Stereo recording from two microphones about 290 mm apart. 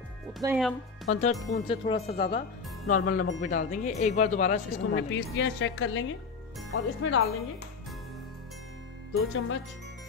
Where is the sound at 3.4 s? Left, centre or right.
Left.